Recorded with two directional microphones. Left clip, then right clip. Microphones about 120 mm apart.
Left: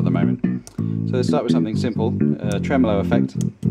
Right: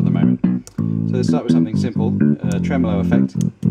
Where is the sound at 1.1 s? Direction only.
25° left (ahead or behind).